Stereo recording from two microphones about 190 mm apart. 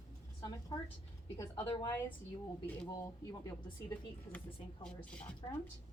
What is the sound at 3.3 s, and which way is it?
A woman's voice, 15° left (ahead or behind).